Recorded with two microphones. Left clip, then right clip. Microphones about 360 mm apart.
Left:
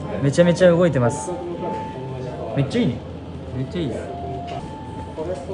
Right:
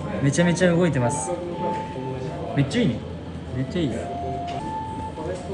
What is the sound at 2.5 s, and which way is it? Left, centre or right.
Speech, centre.